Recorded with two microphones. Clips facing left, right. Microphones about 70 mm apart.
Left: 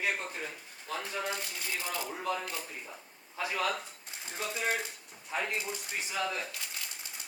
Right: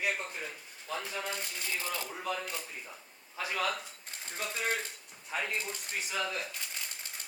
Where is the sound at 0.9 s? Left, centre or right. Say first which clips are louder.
Left 2 dB; centre.